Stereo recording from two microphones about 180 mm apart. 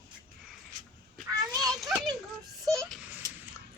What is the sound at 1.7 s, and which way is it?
Children playing, centre (ahead or behind).